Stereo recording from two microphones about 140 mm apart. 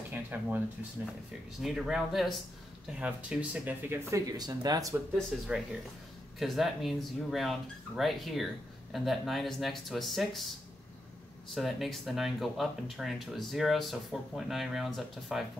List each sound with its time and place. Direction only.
0.1 s speech: 15° right (ahead or behind)
1.6 s speech: 5° right (ahead or behind)
4.1 s speech: 25° right (ahead or behind)
5.1 s speech: 5° right (ahead or behind)
11.5 s speech: centre (ahead or behind)